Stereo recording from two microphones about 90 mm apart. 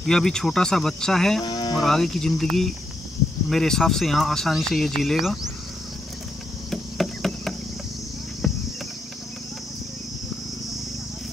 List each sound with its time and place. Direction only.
0.0 s speech: 5° left (ahead or behind)
1.4 s speech: 55° left (ahead or behind)
1.8 s speech: 5° left (ahead or behind)
6.7 s cricket: centre (ahead or behind)